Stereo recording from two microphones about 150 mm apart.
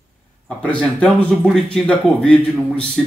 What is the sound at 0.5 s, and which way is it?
Speech, 5° left (ahead or behind).